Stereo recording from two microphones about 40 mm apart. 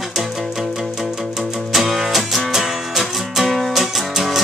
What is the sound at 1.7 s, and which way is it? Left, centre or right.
Music, centre.